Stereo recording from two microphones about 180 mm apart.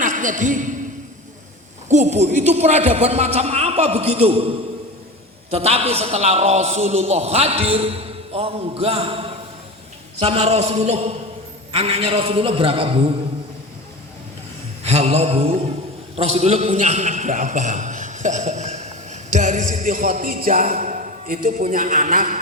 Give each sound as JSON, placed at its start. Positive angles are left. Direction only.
{"t": 0.0, "sound": "a woman's voice", "side_deg": -45}
{"t": 1.9, "sound": "a man's voice", "side_deg": -40}
{"t": 14.8, "sound": "a man's voice", "side_deg": -35}